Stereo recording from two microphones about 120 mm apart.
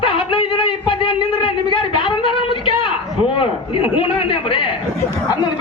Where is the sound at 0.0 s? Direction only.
45° left (ahead or behind).